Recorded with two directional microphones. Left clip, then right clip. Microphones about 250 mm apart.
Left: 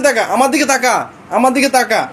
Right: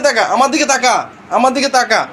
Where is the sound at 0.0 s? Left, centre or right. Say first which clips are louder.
Right 1 dB; left.